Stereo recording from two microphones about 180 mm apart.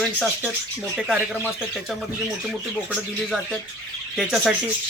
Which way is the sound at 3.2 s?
5° left (ahead or behind).